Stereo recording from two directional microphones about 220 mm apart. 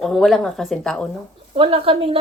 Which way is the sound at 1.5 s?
25° right (ahead or behind).